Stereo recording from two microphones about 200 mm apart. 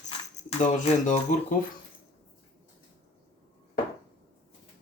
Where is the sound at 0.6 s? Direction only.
35° left (ahead or behind).